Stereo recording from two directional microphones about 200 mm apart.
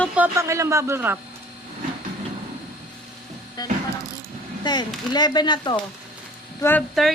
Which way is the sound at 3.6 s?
20° left (ahead or behind).